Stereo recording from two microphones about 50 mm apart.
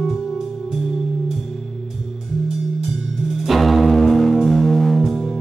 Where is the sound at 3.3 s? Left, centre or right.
Centre.